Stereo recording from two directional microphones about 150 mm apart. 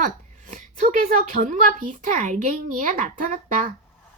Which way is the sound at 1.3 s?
60° right (ahead or behind).